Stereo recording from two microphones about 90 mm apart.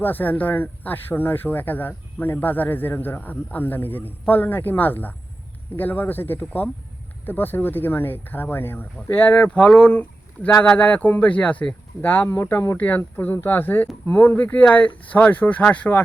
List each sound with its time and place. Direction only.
0.0 s speech: 20° left (ahead or behind)